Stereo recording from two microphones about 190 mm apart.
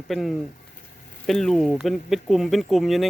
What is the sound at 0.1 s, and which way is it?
Speech, centre (ahead or behind).